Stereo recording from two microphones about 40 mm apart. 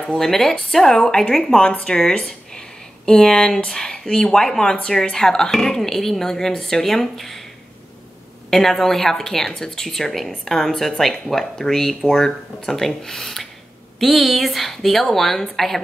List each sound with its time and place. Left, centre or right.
0.2 s speech: centre
8.5 s speech: centre